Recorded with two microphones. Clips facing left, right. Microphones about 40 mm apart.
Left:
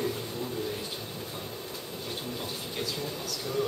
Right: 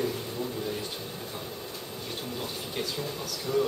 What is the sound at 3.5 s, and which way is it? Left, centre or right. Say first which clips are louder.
Speech: right 5 dB; centre.